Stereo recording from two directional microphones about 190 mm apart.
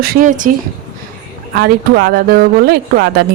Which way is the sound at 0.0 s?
50° right (ahead or behind).